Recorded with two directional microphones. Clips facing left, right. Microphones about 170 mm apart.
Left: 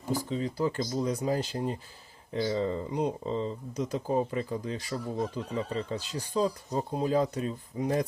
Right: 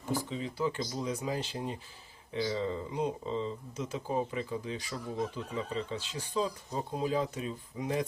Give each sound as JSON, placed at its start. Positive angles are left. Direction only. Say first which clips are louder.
{"t": 0.1, "sound": "speech", "louder": "left 4 dB", "side_deg": 40}